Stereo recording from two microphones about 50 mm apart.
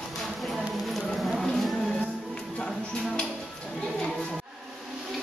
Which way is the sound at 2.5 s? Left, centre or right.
Centre.